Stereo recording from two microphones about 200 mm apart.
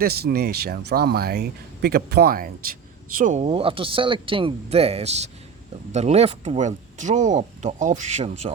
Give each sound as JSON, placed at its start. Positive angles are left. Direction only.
{"t": 0.0, "sound": "speech", "side_deg": -50}